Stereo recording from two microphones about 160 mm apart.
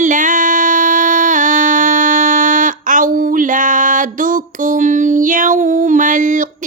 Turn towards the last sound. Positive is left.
turn(degrees=-55)  # may be behind; listen again after turning